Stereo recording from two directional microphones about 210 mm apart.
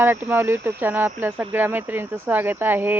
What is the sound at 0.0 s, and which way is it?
Speech, 10° right (ahead or behind).